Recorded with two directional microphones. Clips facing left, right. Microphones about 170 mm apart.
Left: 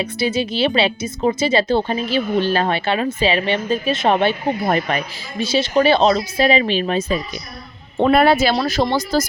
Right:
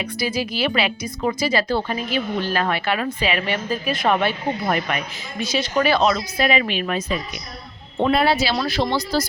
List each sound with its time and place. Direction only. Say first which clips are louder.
0.0 s a woman's voice: left 4 dB; 25° left (ahead or behind)
7.9 s speech: left 4 dB; 55° left (ahead or behind)